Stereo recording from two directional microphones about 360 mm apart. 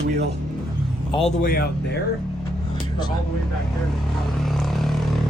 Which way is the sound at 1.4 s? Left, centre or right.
Left.